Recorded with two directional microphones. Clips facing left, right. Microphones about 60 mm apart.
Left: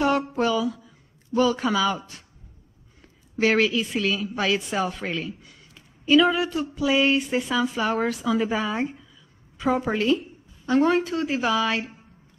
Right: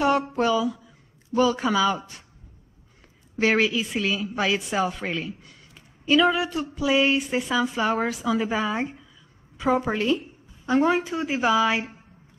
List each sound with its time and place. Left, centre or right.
0.4 s speech: centre
3.4 s speech: centre
10.6 s a sound: centre
10.9 s speech: centre